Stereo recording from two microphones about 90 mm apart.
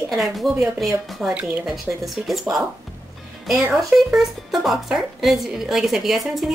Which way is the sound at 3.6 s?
5° right (ahead or behind).